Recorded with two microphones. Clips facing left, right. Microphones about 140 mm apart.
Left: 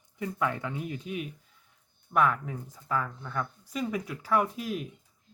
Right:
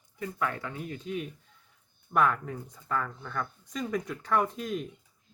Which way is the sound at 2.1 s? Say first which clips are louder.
Even; centre (ahead or behind).